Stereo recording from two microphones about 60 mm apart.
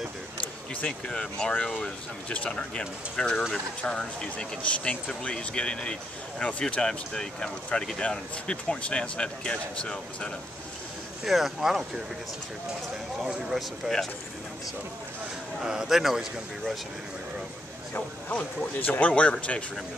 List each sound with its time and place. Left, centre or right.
0.8 s speech: centre
11.2 s speech: centre
13.2 s speech: centre
15.6 s speech: centre
18.3 s speech: left